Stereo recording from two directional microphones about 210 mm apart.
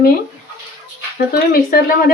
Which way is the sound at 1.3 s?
45° left (ahead or behind).